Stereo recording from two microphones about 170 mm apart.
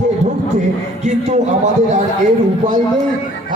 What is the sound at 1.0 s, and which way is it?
Speech, 45° right (ahead or behind).